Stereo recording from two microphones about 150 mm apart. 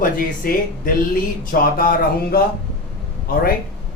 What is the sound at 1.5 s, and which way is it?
Speech, 70° left (ahead or behind).